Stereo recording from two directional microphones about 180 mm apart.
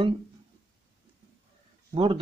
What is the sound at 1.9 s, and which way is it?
Speech, 30° right (ahead or behind).